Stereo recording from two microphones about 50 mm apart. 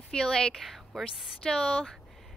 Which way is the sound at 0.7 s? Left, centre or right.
Centre.